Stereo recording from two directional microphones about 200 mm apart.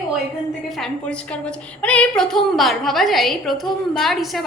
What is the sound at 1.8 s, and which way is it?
A woman's voice, 5° left (ahead or behind).